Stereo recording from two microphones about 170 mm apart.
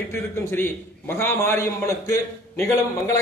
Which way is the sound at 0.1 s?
15° left (ahead or behind).